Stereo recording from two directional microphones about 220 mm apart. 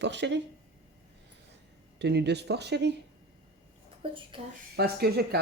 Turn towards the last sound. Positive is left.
turn(degrees=-45)  # may be behind; listen again after turning